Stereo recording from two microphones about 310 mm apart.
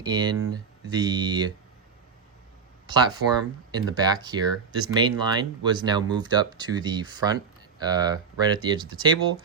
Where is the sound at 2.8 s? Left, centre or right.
Centre.